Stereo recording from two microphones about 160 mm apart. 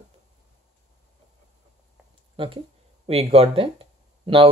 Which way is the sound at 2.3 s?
35° right (ahead or behind).